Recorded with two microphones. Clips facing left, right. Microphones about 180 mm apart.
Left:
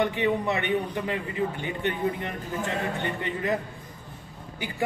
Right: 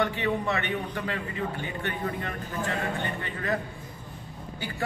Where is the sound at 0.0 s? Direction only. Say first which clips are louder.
Left 2 dB; 15° left (ahead or behind).